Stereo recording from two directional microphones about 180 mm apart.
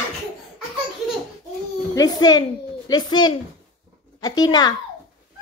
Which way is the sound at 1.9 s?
20° left (ahead or behind).